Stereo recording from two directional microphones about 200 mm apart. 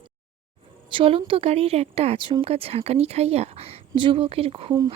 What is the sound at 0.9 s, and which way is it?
Speech, 25° right (ahead or behind).